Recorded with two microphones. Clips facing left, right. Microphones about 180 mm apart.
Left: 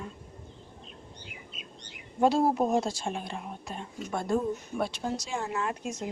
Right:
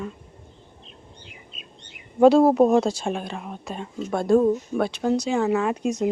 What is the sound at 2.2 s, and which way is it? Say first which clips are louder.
Speech: right 9 dB; 70° right (ahead or behind).